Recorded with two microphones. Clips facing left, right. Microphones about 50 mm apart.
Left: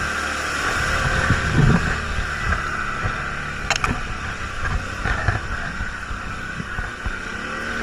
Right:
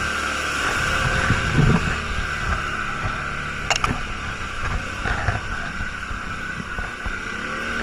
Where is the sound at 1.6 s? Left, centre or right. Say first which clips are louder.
Left 1 dB; left.